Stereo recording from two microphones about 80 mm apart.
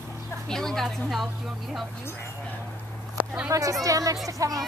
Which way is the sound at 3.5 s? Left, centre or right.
Right.